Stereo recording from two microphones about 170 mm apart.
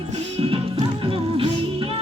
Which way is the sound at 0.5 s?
30° right (ahead or behind).